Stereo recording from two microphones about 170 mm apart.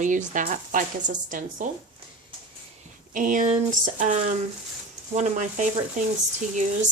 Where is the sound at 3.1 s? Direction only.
50° right (ahead or behind).